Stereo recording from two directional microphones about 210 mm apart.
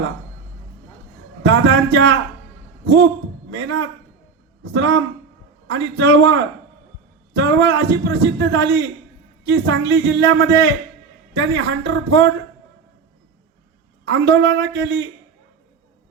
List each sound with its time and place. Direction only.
1.5 s a man's voice: 60° right (ahead or behind)
14.0 s a man's voice: 55° right (ahead or behind)